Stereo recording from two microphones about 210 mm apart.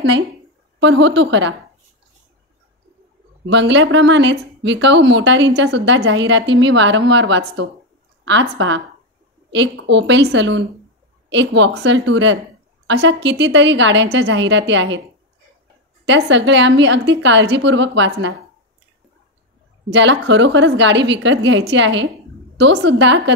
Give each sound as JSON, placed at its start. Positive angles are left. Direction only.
{"t": 0.7, "sound": "speech", "side_deg": -60}
{"t": 3.4, "sound": "speech", "side_deg": -60}
{"t": 16.1, "sound": "speech", "side_deg": -55}
{"t": 19.9, "sound": "speech", "side_deg": -60}